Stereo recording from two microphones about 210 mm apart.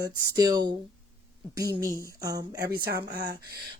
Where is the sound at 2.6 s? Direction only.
50° right (ahead or behind).